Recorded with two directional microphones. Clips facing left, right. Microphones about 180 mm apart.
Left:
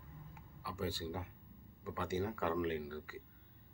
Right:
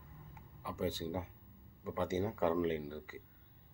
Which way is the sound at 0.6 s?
20° right (ahead or behind).